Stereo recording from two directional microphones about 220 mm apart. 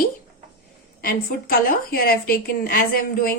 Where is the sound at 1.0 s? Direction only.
40° left (ahead or behind).